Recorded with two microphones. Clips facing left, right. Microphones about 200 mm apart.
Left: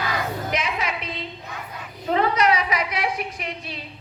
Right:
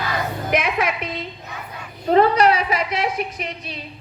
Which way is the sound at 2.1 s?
35° right (ahead or behind).